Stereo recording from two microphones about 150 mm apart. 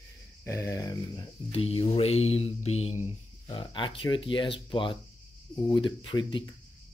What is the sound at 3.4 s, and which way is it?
Speech, 30° left (ahead or behind).